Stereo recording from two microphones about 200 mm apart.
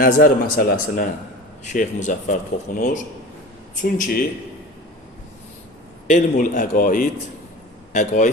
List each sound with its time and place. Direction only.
0.0 s a man's voice: 45° left (ahead or behind)
6.1 s a man's voice: 40° left (ahead or behind)